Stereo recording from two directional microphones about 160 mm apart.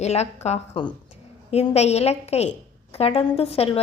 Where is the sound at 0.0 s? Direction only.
45° left (ahead or behind).